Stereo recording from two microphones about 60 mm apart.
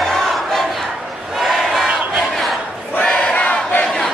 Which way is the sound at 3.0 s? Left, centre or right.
Centre.